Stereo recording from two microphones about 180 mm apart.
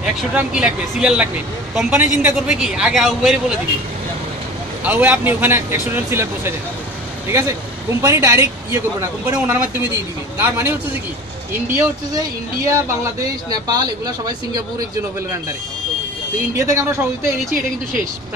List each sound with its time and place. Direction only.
0.0 s speech: 5° right (ahead or behind)
4.8 s speech: 10° right (ahead or behind)
8.0 s speech: 15° right (ahead or behind)
13.5 s speech: 20° right (ahead or behind)
16.5 s speech: 15° right (ahead or behind)